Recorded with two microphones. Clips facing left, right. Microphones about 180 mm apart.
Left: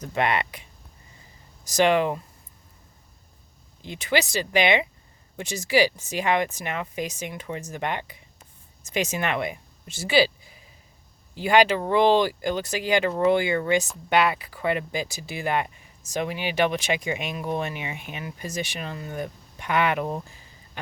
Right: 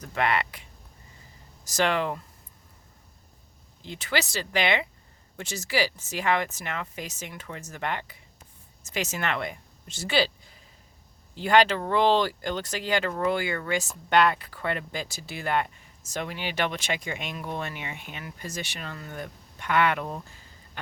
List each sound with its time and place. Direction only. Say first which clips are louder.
0.0 s speech: left 2 dB; 20° left (ahead or behind)
1.6 s speech: left 5 dB; 15° left (ahead or behind)
3.8 s speech: left 4 dB; 15° left (ahead or behind)
14.1 s speech: even; 10° left (ahead or behind)